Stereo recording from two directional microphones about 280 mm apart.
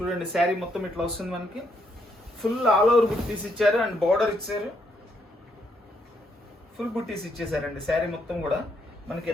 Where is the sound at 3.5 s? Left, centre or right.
Centre.